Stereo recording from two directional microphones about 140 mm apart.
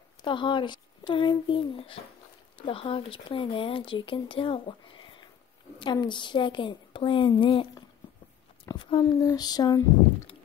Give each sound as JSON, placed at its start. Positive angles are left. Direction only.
{"t": 0.2, "sound": "speech", "side_deg": 35}
{"t": 8.6, "sound": "a sound", "side_deg": 35}
{"t": 9.2, "sound": "female singing", "side_deg": 25}